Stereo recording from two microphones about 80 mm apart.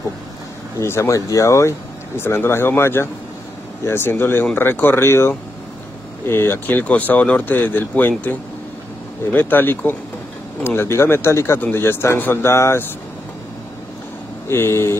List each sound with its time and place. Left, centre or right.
0.7 s speech: left
14.5 s speech: left